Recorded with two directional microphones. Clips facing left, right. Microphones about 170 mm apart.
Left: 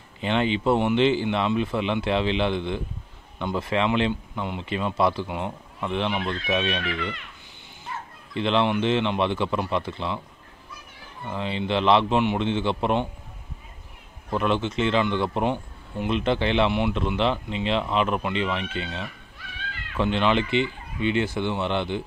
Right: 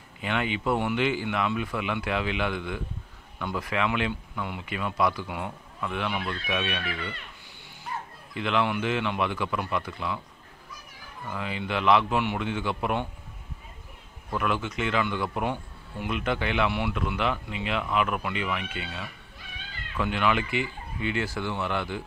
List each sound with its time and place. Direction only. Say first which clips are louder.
0.2 s a man's voice: left 5 dB; 30° left (ahead or behind)
8.4 s a man's voice: left 4 dB; 30° left (ahead or behind)
11.2 s a man's voice: left 5 dB; 25° left (ahead or behind)
14.3 s a man's voice: left 5 dB; 25° left (ahead or behind)